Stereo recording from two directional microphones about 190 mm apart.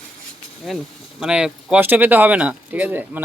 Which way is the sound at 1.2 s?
5° right (ahead or behind).